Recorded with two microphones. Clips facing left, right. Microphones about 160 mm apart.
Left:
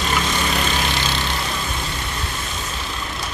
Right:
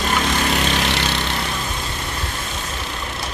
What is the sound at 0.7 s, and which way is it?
Vehicle, 70° right (ahead or behind).